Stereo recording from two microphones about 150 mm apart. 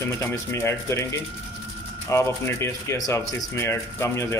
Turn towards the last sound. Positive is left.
turn(degrees=20)  # may be behind; listen again after turning